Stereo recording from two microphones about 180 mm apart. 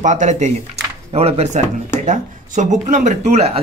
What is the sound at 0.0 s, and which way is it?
Speech, 45° right (ahead or behind).